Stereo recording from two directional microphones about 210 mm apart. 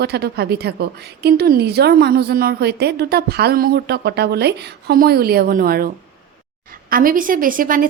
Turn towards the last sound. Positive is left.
turn(degrees=-40)  # may be behind; listen again after turning